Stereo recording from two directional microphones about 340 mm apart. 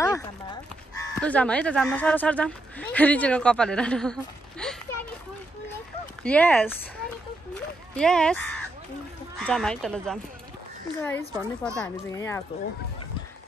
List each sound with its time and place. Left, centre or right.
0.0 s speech: centre
6.2 s speech: centre
7.5 s a sound: centre
9.4 s speech: centre